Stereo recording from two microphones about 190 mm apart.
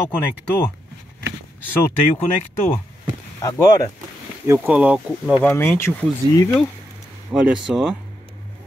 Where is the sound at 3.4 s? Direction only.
15° left (ahead or behind).